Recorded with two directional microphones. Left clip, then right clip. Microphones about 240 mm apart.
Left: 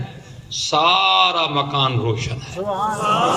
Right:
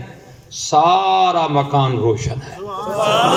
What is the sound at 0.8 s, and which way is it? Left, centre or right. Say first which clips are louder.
Speech: even; left.